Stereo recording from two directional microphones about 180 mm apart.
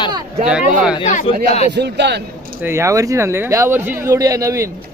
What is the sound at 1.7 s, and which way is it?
Speech, 70° right (ahead or behind).